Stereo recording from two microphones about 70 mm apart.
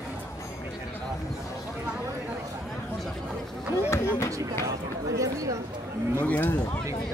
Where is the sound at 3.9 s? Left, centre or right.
Left.